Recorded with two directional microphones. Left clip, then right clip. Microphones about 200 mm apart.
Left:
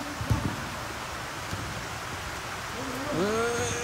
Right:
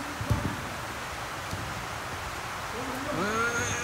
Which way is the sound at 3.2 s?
10° left (ahead or behind).